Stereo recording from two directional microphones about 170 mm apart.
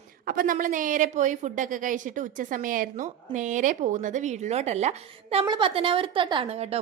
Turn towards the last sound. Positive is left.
turn(degrees=-35)  # may be behind; listen again after turning